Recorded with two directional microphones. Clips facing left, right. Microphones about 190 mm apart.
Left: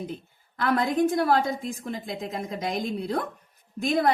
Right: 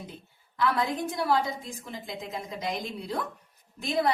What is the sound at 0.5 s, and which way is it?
A woman's voice, 50° left (ahead or behind).